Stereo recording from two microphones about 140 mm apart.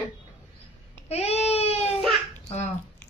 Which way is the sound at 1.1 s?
50° left (ahead or behind).